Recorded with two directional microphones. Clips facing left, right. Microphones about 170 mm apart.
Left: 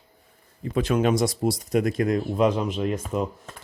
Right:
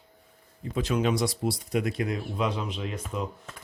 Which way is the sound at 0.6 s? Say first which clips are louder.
Left 4 dB; 60° left (ahead or behind).